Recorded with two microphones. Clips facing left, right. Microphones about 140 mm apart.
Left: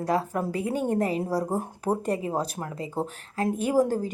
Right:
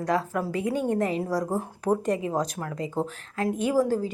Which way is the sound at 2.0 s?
35° left (ahead or behind).